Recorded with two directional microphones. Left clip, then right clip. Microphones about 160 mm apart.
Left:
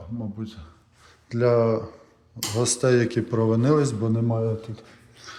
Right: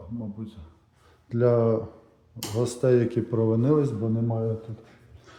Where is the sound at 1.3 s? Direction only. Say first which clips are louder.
Left 2 dB; 20° right (ahead or behind).